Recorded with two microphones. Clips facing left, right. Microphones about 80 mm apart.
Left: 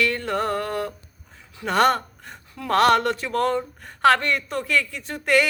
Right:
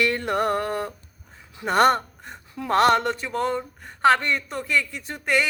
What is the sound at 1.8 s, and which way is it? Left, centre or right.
Gasp, centre.